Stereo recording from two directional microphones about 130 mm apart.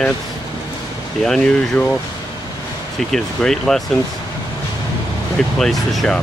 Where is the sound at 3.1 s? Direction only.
5° left (ahead or behind).